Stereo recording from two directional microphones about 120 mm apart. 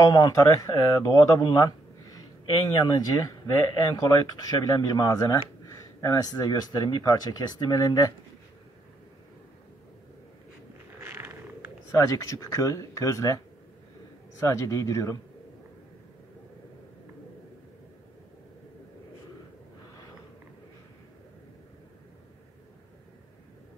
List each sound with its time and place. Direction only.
0.0 s speech: 30° left (ahead or behind)
11.0 s a sound: 20° right (ahead or behind)
11.9 s speech: 25° left (ahead or behind)
14.4 s speech: 25° left (ahead or behind)